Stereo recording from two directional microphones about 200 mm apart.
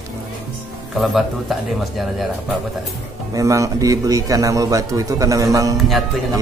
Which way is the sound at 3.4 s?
15° right (ahead or behind).